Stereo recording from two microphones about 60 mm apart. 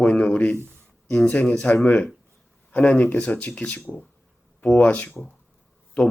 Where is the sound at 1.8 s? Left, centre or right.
Left.